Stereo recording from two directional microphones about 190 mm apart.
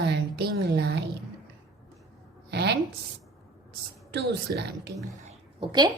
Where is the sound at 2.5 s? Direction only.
60° right (ahead or behind).